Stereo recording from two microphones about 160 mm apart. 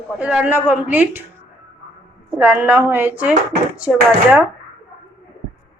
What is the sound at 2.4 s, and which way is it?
A woman's voice, 15° right (ahead or behind).